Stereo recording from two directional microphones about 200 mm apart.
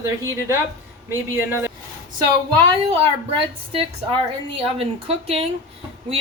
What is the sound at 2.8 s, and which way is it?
A woman's voice, 30° right (ahead or behind).